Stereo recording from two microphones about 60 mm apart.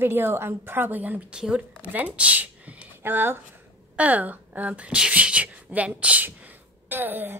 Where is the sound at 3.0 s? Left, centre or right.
Right.